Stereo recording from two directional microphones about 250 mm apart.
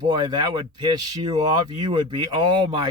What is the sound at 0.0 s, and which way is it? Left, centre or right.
Speech, centre.